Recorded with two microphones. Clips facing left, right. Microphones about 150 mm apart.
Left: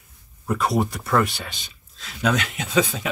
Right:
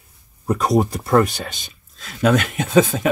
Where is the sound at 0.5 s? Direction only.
40° right (ahead or behind).